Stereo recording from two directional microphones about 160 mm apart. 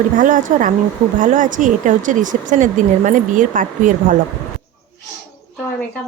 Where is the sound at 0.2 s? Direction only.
55° right (ahead or behind).